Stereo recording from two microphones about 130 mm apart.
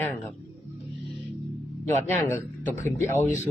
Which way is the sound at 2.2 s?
15° left (ahead or behind).